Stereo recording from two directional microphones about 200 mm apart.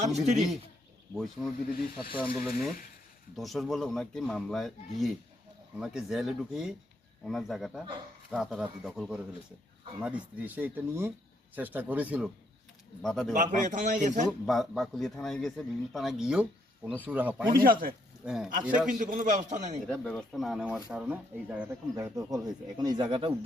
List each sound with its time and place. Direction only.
0.0 s speech: 35° right (ahead or behind)
1.1 s speech: centre (ahead or behind)
13.3 s speech: 40° right (ahead or behind)
14.3 s speech: centre (ahead or behind)
17.5 s speech: 45° right (ahead or behind)
18.3 s speech: 5° right (ahead or behind)
18.9 s speech: 40° right (ahead or behind)
19.9 s speech: 5° left (ahead or behind); by 23.3 s 25° right (ahead or behind)